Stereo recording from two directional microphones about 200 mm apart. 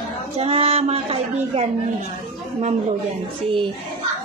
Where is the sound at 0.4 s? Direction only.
30° right (ahead or behind).